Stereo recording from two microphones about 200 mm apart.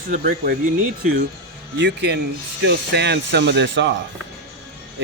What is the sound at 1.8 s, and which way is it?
Speech, 55° right (ahead or behind).